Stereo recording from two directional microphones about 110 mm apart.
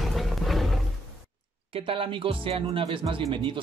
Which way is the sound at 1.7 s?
55° right (ahead or behind).